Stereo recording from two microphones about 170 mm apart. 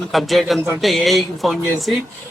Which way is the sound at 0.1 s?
Centre (ahead or behind).